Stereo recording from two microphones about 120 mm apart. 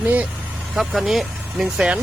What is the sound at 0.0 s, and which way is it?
Speech, 15° right (ahead or behind).